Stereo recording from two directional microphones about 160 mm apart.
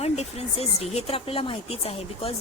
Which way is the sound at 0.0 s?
40° left (ahead or behind).